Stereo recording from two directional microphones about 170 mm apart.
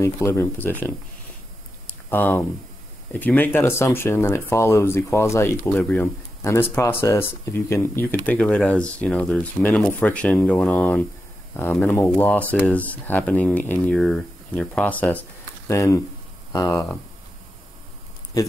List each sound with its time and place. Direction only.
0.0 s speech: 15° left (ahead or behind)
2.0 s speech: 10° left (ahead or behind)